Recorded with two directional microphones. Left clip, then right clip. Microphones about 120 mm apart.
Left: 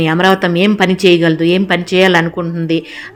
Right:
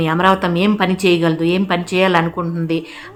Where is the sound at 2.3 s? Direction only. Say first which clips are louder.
Left 3 dB; 15° left (ahead or behind).